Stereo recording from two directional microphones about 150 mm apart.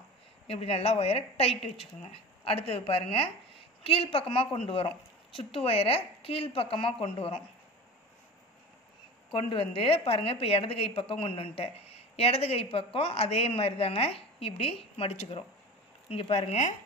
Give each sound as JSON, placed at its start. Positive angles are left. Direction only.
{"t": 0.5, "sound": "a woman's voice", "side_deg": 40}
{"t": 9.3, "sound": "a woman's voice", "side_deg": 35}